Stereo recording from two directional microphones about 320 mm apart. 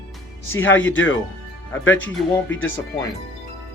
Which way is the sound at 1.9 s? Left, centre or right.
Centre.